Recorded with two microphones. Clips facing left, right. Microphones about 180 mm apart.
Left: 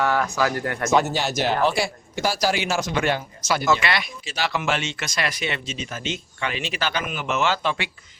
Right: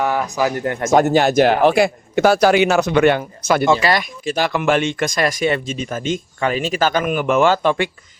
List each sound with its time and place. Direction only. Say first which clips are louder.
0.0 s speech: right 3 dB; 15° right (ahead or behind)
0.9 s speech: right 8 dB; 50° right (ahead or behind)
3.7 s speech: right 6 dB; 35° right (ahead or behind)